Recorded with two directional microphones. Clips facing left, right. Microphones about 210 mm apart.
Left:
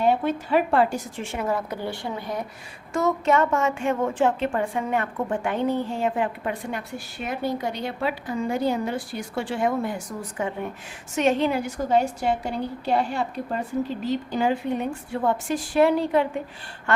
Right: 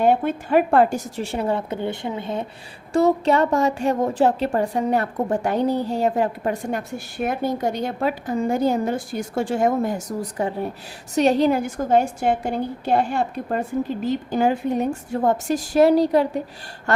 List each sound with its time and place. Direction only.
0.0 s a woman's voice: 50° right (ahead or behind)